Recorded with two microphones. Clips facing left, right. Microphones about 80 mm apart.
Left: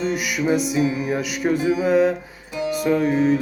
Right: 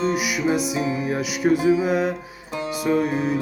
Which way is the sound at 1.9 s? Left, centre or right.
Centre.